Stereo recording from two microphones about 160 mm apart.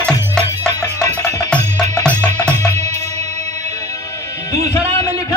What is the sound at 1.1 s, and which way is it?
Music, 20° left (ahead or behind).